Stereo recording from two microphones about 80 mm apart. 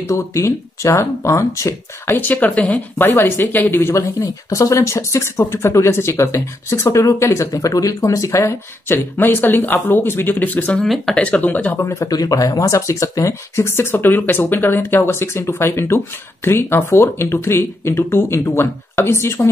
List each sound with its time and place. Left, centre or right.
0.1 s speech: left
2.1 s speech: left
4.2 s speech: left; by 10.9 s centre
10.9 s speech: centre
11.2 s speech: centre
11.8 s speech: left
12.1 s speech: left